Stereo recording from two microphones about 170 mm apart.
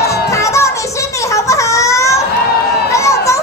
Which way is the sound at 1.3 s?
20° left (ahead or behind).